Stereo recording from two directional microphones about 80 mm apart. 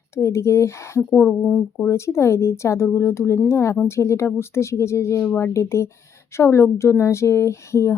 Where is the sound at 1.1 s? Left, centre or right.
Left.